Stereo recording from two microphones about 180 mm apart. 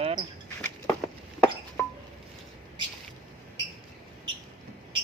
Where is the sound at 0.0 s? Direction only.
35° right (ahead or behind).